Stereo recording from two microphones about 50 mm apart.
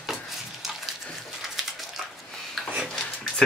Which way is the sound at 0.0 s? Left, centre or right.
Centre.